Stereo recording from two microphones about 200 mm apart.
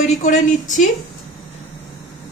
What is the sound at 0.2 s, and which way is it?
Speech, 40° left (ahead or behind).